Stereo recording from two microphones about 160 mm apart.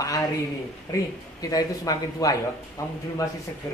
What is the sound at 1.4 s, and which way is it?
Speech, 25° left (ahead or behind).